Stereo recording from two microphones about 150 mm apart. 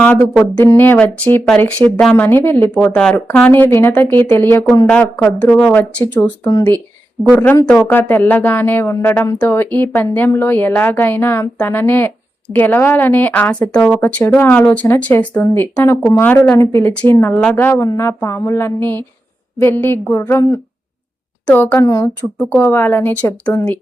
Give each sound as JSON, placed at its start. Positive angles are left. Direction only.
{"t": 0.0, "sound": "speech", "side_deg": 10}
{"t": 21.8, "sound": "speech", "side_deg": 20}